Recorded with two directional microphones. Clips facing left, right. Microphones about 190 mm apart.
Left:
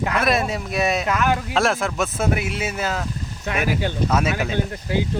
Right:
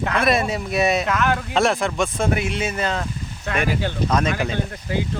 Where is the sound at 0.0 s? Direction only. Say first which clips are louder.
Right 1 dB; 5° left (ahead or behind).